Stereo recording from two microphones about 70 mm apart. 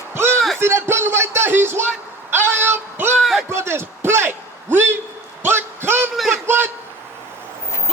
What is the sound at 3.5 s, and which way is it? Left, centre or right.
A man's voice, right.